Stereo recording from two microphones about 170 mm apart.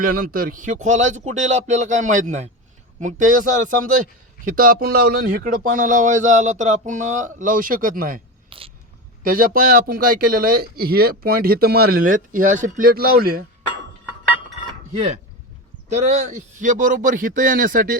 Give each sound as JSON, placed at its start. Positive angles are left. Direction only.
{"t": 0.0, "sound": "speech", "side_deg": -60}
{"t": 8.4, "sound": "a sound", "side_deg": -30}
{"t": 9.2, "sound": "a man's voice", "side_deg": -55}
{"t": 14.9, "sound": "speech", "side_deg": -40}